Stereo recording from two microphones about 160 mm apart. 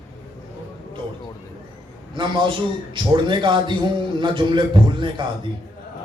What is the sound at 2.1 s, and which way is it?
Speech, 30° right (ahead or behind).